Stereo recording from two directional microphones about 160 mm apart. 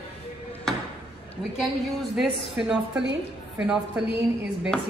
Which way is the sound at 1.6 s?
Centre (ahead or behind).